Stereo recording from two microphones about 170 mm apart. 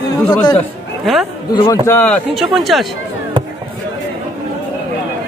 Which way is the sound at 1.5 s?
20° left (ahead or behind).